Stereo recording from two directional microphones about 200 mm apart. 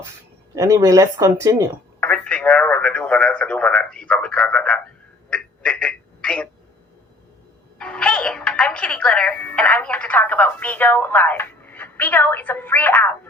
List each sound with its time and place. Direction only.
0.5 s speech: 15° right (ahead or behind)
2.0 s speech: 5° left (ahead or behind)
5.3 s a sound: 5° left (ahead or behind)
7.8 s speech: 5° left (ahead or behind)